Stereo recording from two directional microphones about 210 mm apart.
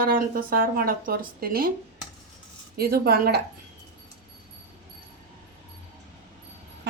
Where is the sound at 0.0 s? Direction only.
45° right (ahead or behind).